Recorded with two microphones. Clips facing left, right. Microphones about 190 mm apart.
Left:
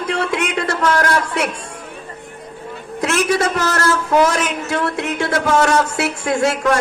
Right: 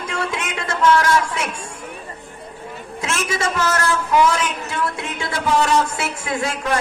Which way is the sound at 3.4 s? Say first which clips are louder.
Left 3 dB; 40° left (ahead or behind).